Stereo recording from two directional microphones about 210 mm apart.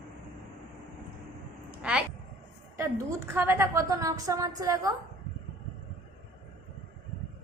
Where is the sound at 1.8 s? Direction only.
5° right (ahead or behind).